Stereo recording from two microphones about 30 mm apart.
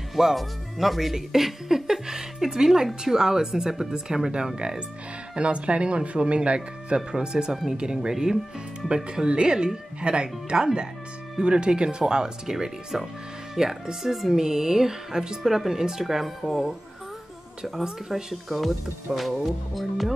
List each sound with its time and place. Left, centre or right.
0.1 s speech: centre
1.1 s music: centre
3.0 s speech: centre
4.6 s speech: right
7.1 s speech: right
8.8 s speech: right
12.0 s speech: right
18.3 s speech: centre